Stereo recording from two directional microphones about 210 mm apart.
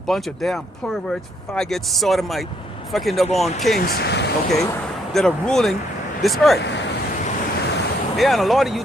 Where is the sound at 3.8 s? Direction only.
50° left (ahead or behind).